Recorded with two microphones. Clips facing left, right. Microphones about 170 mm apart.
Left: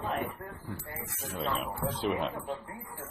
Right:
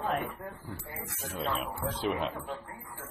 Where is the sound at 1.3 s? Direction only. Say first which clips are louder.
Even; centre (ahead or behind).